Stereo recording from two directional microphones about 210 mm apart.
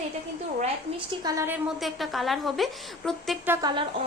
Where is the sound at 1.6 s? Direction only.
Centre (ahead or behind).